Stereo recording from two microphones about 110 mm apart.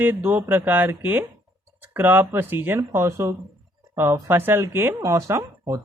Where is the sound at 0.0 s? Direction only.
20° right (ahead or behind).